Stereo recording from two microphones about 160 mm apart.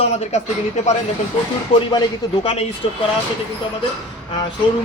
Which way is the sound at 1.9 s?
25° left (ahead or behind).